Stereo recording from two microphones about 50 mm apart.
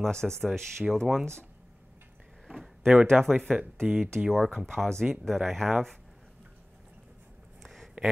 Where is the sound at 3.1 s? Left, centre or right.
Centre.